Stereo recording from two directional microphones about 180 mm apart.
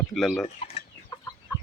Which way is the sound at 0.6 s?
30° left (ahead or behind).